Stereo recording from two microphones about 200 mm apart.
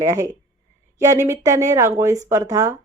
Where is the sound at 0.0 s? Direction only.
15° right (ahead or behind).